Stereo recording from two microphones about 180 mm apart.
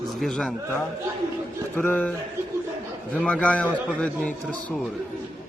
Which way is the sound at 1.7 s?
10° left (ahead or behind).